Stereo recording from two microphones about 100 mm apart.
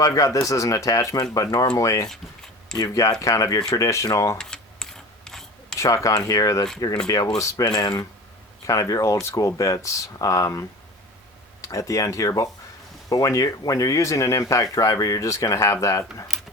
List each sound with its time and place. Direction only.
0.0 s speech: 35° left (ahead or behind)
4.4 s mechanisms: 5° left (ahead or behind)
5.8 s speech: 30° left (ahead or behind)